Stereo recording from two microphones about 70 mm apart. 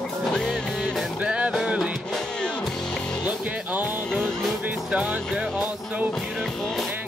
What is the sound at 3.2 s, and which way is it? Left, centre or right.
Music, right.